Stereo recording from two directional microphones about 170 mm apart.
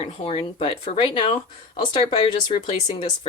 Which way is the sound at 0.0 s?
35° left (ahead or behind).